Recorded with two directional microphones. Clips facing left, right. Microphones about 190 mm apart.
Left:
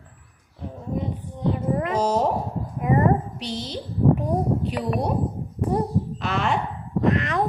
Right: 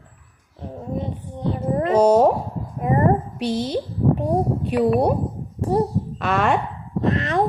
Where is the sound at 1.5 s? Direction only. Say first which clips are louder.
Right 7 dB; 35° right (ahead or behind).